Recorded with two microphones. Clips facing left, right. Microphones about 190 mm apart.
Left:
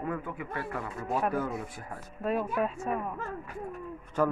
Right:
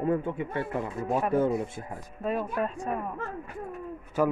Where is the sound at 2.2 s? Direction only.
Centre (ahead or behind).